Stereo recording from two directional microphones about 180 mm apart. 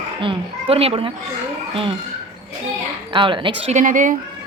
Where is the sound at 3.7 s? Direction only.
45° right (ahead or behind).